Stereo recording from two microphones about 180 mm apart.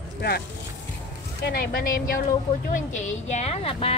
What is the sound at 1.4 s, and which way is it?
Speech, 55° left (ahead or behind).